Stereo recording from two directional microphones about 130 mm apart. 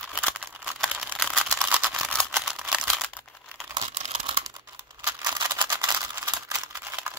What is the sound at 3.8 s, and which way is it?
Crumpling, 60° right (ahead or behind).